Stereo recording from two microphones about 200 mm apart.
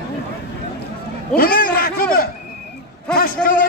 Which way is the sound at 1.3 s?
45° left (ahead or behind).